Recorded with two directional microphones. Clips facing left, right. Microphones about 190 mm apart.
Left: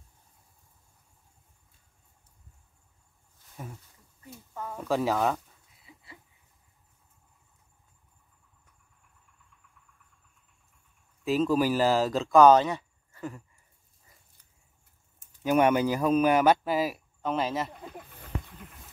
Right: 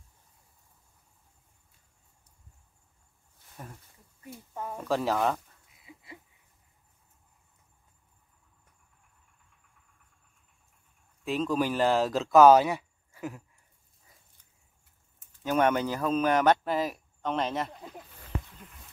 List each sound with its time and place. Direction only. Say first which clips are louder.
4.6 s speech: even; 20° right (ahead or behind)
4.8 s speech: left 1 dB; centre (ahead or behind)
11.2 s speech: left 4 dB; 5° left (ahead or behind)
15.4 s speech: left 3 dB; 10° left (ahead or behind)